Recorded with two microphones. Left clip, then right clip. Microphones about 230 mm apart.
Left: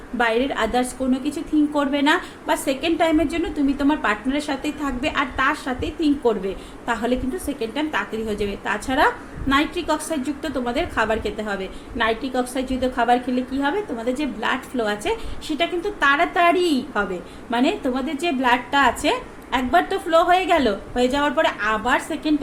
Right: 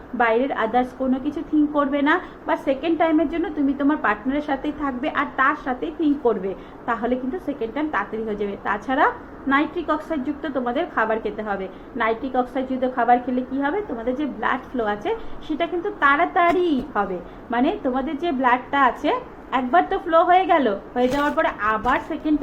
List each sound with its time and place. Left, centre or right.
0.2 s a woman's voice: left